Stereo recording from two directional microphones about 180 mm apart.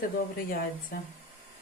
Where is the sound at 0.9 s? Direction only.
55° left (ahead or behind).